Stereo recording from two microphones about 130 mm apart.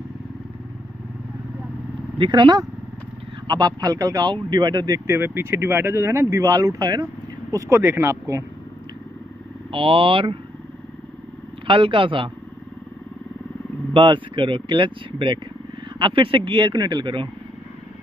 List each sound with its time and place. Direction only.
2.1 s a man's voice: 35° right (ahead or behind); by 8.5 s 20° right (ahead or behind)
9.7 s a man's voice: 45° right (ahead or behind)
11.6 s a man's voice: 40° right (ahead or behind)
13.9 s speech: 40° right (ahead or behind)